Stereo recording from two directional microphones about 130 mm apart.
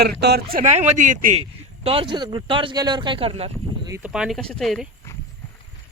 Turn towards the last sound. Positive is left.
turn(degrees=0)  # may be behind; listen again after turning